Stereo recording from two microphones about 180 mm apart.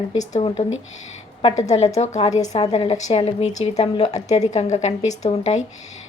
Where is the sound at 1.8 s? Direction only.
40° left (ahead or behind).